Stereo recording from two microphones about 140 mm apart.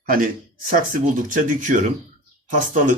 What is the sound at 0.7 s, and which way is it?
Speech, 75° right (ahead or behind).